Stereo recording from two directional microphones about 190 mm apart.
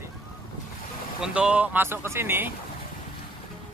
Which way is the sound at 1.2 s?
5° right (ahead or behind).